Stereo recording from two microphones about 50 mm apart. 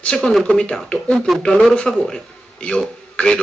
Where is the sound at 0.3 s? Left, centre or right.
Centre.